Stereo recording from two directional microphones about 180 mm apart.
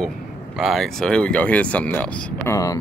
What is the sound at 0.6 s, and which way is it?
Speech, centre (ahead or behind).